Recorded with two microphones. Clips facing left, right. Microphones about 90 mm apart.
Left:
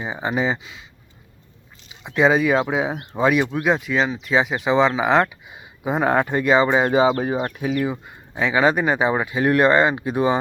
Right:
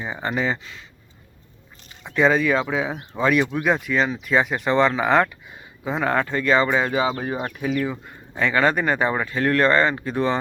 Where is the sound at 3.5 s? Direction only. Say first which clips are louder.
Left 1 dB; centre (ahead or behind).